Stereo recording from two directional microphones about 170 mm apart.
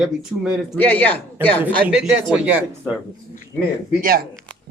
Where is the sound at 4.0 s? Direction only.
60° right (ahead or behind).